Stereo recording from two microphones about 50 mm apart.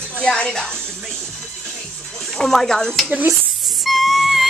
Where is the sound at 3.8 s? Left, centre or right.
Centre.